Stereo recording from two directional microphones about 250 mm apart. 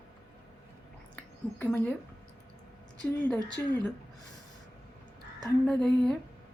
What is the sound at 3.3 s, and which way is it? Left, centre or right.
Speech, centre.